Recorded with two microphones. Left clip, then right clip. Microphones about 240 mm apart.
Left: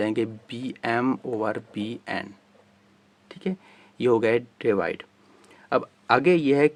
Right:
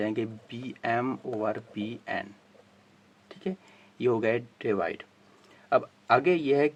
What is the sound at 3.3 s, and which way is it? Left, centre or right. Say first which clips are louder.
Speech: left 3 dB; left.